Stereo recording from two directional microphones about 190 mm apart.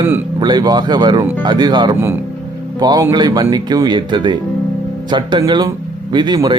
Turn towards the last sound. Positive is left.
turn(degrees=-20)  # may be behind; listen again after turning